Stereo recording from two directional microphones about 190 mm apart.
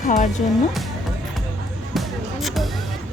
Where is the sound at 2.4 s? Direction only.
Centre (ahead or behind).